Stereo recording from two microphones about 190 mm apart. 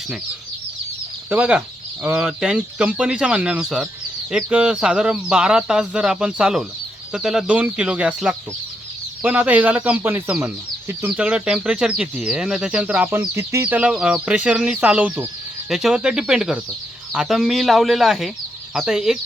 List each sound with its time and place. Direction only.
1.3 s speech: 5° right (ahead or behind)